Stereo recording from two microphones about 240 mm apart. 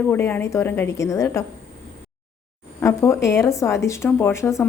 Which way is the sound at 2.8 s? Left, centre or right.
Centre.